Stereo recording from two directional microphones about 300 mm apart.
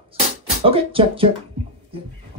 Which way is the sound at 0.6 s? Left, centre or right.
Centre.